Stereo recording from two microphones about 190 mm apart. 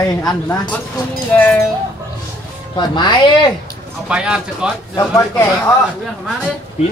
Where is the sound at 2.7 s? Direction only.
25° left (ahead or behind).